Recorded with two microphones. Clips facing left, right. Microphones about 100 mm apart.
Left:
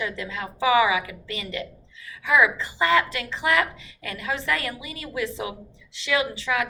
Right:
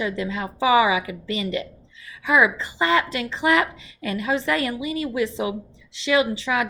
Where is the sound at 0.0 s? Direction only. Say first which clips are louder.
Right 5 dB; 20° right (ahead or behind).